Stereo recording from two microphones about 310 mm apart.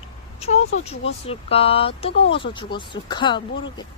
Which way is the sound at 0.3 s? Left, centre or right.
Centre.